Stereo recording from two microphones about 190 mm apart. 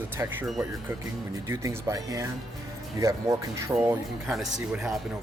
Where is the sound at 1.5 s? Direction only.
15° right (ahead or behind).